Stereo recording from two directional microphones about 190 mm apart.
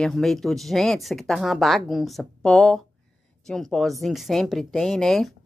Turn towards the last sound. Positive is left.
turn(degrees=0)  # may be behind; listen again after turning